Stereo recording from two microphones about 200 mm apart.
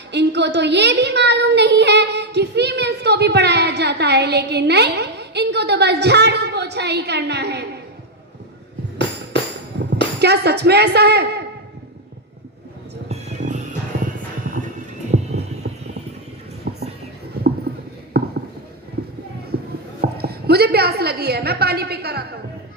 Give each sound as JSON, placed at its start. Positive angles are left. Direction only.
{"t": 0.1, "sound": "a woman's voice", "side_deg": -60}
{"t": 9.7, "sound": "music", "side_deg": -55}
{"t": 10.2, "sound": "a woman's voice", "side_deg": -55}
{"t": 13.1, "sound": "music", "side_deg": -35}
{"t": 15.1, "sound": "heart sounds", "side_deg": -35}
{"t": 16.7, "sound": "music", "side_deg": -55}
{"t": 18.1, "sound": "a sound", "side_deg": -50}
{"t": 19.5, "sound": "a sound", "side_deg": -50}